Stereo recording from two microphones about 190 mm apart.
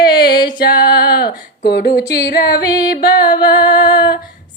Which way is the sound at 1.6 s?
60° left (ahead or behind).